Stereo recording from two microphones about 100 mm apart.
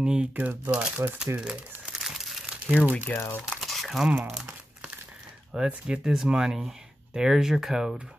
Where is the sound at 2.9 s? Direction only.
20° left (ahead or behind).